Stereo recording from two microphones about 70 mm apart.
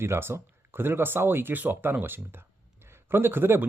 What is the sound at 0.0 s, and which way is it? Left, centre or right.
A man's voice, right.